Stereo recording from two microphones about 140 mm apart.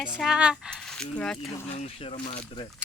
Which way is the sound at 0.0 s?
5° right (ahead or behind).